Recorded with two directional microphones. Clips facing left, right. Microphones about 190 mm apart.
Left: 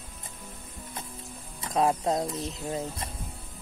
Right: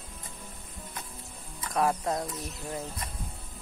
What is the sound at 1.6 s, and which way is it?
Speech, 25° left (ahead or behind).